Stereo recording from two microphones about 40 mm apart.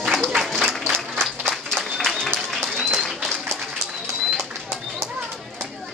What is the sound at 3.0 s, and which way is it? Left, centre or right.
Applause, centre.